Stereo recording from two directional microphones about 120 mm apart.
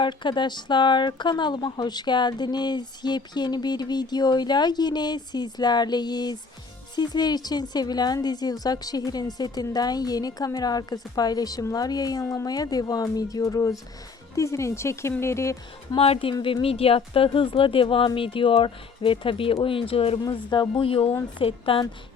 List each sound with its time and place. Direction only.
0.0 s a woman's voice: 40° left (ahead or behind); by 16.0 s 25° left (ahead or behind)
16.0 s speech: 50° left (ahead or behind)